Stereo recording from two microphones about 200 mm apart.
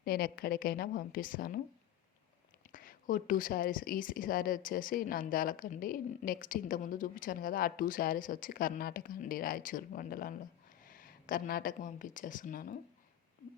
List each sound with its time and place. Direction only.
0.0 s a woman's voice: 50° left (ahead or behind)
2.7 s a woman's voice: 45° left (ahead or behind)